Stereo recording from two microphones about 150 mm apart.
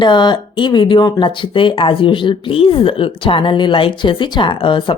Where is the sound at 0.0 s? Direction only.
30° left (ahead or behind).